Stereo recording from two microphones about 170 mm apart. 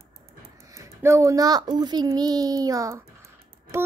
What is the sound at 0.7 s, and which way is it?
Speech, 15° right (ahead or behind).